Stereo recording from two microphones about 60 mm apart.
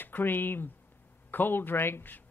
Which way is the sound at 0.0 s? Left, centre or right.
Left.